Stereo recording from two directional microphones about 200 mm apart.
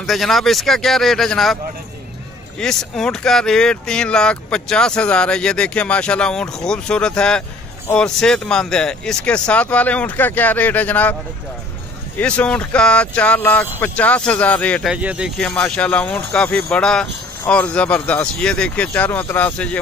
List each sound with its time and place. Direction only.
0.0 s speech: centre (ahead or behind)
2.6 s speech: 5° left (ahead or behind)
12.2 s speech: 5° left (ahead or behind)